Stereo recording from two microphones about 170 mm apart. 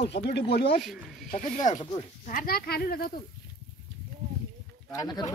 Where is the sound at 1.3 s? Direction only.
50° left (ahead or behind).